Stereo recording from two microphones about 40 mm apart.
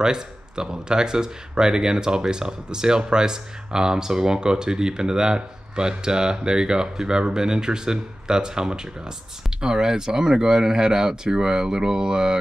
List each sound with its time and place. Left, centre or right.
0.0 s speech: centre